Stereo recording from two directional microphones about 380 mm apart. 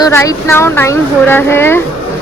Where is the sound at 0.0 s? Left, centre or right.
Centre.